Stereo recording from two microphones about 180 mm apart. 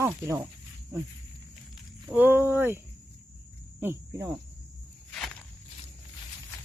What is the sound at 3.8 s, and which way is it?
Speech, 15° right (ahead or behind).